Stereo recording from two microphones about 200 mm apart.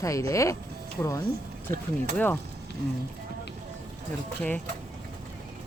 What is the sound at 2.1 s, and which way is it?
Speech, 10° left (ahead or behind).